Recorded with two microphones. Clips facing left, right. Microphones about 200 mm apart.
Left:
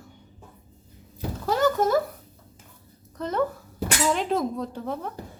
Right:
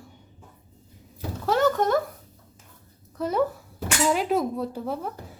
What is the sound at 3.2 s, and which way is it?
A woman's voice, 10° right (ahead or behind).